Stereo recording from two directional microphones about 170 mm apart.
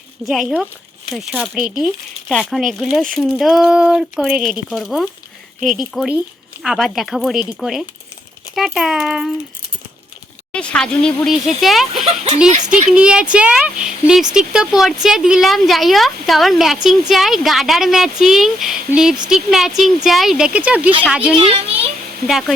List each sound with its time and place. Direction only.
0.3 s a woman's voice: 5° right (ahead or behind)
10.5 s a woman's voice: 5° left (ahead or behind)
21.3 s a child's voice: 35° right (ahead or behind)
22.3 s a woman's voice: centre (ahead or behind)